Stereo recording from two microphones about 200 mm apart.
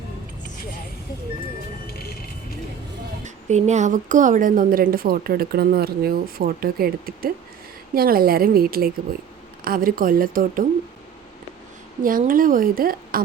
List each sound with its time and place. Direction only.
1.9 s music: 50° left (ahead or behind)
3.2 s a woman's voice: 35° right (ahead or behind)
12.0 s a woman's voice: 45° right (ahead or behind)